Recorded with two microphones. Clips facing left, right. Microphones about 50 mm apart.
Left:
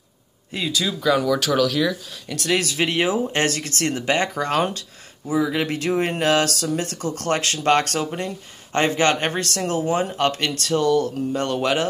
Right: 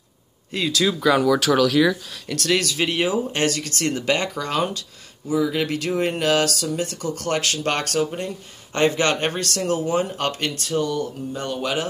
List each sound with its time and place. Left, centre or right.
0.5 s speech: centre
0.8 s speech: centre
2.2 s speech: centre
2.6 s speech: left
9.3 s speech: left